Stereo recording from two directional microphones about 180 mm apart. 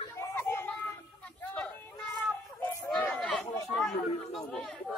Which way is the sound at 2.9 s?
5° left (ahead or behind).